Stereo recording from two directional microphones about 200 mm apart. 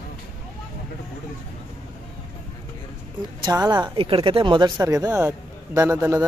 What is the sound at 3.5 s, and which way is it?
Speech, 15° right (ahead or behind).